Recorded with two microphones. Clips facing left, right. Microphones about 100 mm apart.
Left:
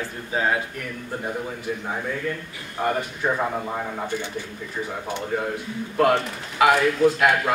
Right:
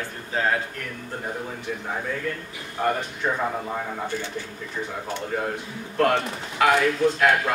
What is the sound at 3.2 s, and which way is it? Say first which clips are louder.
A man's voice: left 1 dB; 20° left (ahead or behind).